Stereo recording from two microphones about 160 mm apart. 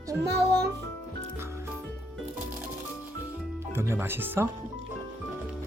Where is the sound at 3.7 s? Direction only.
15° right (ahead or behind).